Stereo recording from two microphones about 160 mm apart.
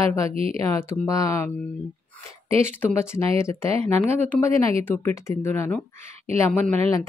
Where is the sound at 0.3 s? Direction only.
35° right (ahead or behind).